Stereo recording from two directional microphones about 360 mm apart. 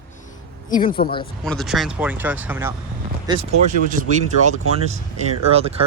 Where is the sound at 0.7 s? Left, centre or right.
Centre.